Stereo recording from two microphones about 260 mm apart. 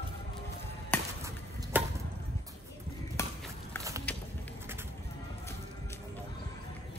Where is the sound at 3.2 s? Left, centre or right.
Centre.